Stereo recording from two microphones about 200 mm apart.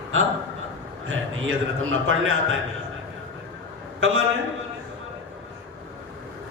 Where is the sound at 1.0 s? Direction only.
90° right.